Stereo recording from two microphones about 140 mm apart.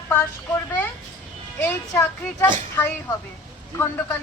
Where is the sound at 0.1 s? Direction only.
15° left (ahead or behind).